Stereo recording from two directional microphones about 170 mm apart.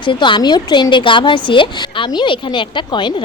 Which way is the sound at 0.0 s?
30° left (ahead or behind).